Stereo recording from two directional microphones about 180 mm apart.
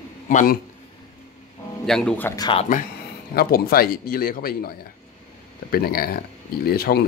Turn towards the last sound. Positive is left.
turn(degrees=60)  # may be behind; listen again after turning